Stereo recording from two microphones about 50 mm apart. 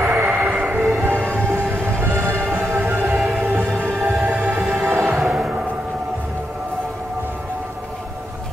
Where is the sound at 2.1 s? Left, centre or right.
Right.